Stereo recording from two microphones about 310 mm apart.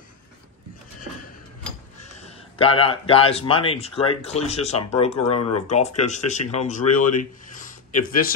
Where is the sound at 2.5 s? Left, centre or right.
Centre.